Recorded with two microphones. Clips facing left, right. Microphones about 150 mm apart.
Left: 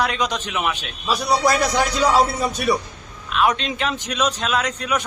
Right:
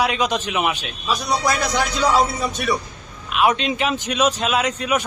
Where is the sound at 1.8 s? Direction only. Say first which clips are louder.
Even; 5° left (ahead or behind).